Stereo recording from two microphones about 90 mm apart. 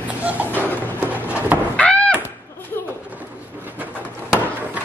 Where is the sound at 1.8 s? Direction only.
10° left (ahead or behind).